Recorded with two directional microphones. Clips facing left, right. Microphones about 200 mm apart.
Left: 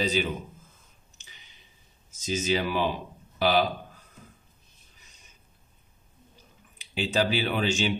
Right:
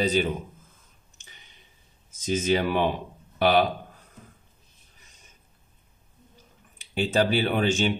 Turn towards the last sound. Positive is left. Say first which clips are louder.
# right 3 dB
turn(degrees=-50)  # may be behind; listen again after turning